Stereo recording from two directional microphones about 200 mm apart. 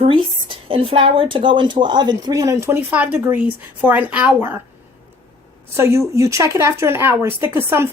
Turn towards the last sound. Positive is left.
turn(degrees=-10)  # may be behind; listen again after turning